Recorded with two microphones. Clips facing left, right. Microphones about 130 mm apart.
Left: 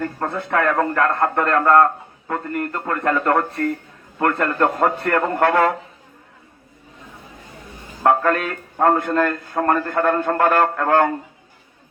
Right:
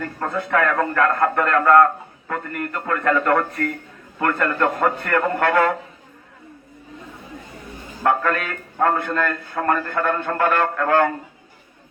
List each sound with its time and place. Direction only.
0.0 s a man's voice: 30° left (ahead or behind)
4.5 s a man's voice: 25° left (ahead or behind)
8.0 s a man's voice: 35° left (ahead or behind)